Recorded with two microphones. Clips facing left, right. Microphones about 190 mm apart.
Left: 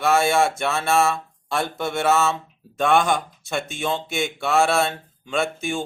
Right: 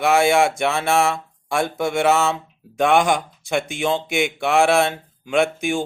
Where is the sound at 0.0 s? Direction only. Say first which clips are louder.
Right 3 dB; 15° right (ahead or behind).